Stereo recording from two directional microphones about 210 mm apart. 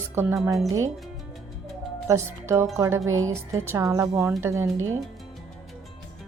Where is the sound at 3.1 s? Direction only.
75° right (ahead or behind).